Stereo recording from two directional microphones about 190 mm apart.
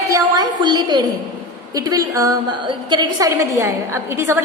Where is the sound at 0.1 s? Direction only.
20° right (ahead or behind).